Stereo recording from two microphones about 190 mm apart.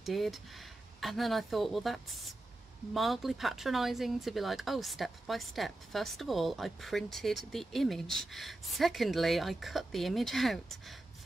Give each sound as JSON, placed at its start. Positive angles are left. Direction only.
{"t": 0.0, "sound": "speech", "side_deg": 0}